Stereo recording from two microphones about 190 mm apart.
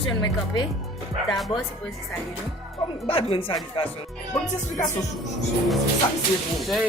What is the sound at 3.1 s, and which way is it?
Speech, 30° left (ahead or behind).